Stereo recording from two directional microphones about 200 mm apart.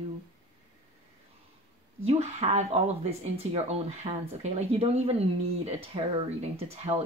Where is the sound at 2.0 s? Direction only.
30° right (ahead or behind).